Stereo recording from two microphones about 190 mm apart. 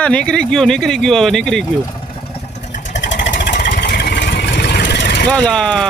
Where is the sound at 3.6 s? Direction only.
45° left (ahead or behind).